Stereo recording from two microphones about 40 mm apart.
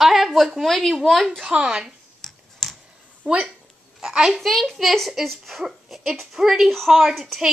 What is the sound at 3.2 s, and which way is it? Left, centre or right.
Speech, right.